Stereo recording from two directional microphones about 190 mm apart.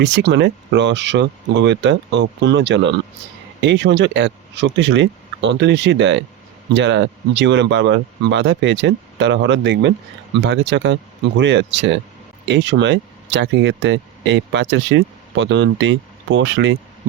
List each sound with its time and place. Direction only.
0.0 s speech: 70° right (ahead or behind)